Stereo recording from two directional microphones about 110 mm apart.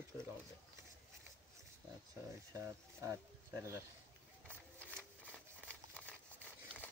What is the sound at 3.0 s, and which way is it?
Speech, 25° right (ahead or behind).